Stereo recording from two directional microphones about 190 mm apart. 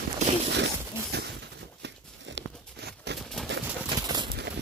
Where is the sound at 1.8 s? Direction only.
65° right (ahead or behind).